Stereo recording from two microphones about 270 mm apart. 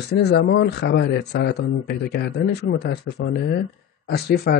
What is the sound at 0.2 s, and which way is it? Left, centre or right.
A man's voice, left.